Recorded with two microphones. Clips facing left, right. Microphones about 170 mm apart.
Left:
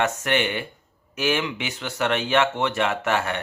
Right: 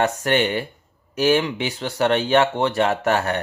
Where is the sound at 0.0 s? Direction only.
35° right (ahead or behind).